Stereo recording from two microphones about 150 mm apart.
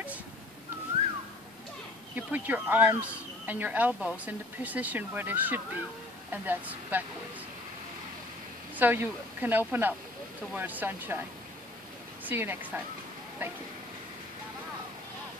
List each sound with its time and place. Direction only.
2.1 s speech: 10° right (ahead or behind)
8.7 s speech: 15° right (ahead or behind)
12.3 s speech: 15° right (ahead or behind)